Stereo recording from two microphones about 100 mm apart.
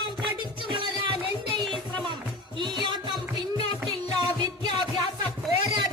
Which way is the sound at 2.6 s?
50° right (ahead or behind).